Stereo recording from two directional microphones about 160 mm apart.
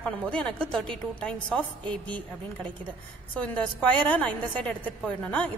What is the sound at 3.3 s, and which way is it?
A woman's voice, 10° left (ahead or behind).